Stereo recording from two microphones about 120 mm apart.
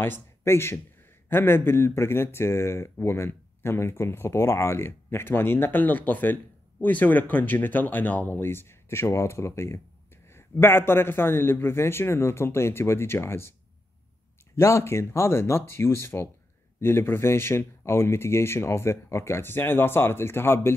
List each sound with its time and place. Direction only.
0.4 s speech: 20° left (ahead or behind)